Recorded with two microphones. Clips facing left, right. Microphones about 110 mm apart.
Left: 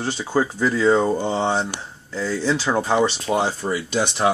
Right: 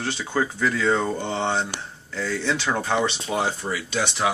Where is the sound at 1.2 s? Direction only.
35° left (ahead or behind).